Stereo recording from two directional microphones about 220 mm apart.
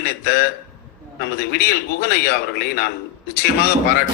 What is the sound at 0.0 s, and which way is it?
A man's voice, 45° left (ahead or behind).